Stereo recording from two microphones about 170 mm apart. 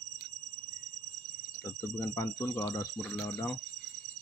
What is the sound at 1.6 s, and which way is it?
Speech, 15° left (ahead or behind).